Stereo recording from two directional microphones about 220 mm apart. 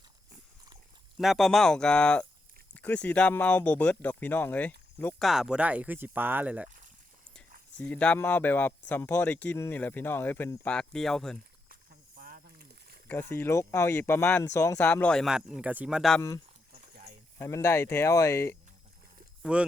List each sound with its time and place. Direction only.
1.2 s speech: centre (ahead or behind)
5.3 s speech: 5° right (ahead or behind)
7.8 s speech: 5° left (ahead or behind)
11.7 s snake: 40° right (ahead or behind)
13.3 s speech: 10° left (ahead or behind)
17.3 s speech: 10° left (ahead or behind)
19.4 s speech: 5° right (ahead or behind)